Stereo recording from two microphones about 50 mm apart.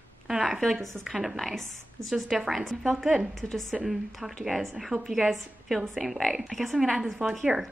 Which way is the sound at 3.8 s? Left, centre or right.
Centre.